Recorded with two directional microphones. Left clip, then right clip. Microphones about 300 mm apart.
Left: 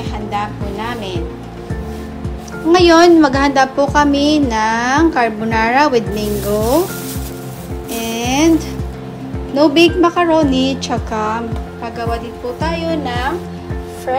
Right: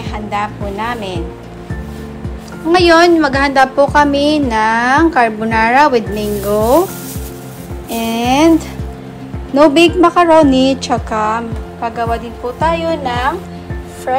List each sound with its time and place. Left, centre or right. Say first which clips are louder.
0.0 s a woman's voice: right 2 dB; centre
2.7 s a woman's voice: even; centre
7.9 s a woman's voice: right 4 dB; centre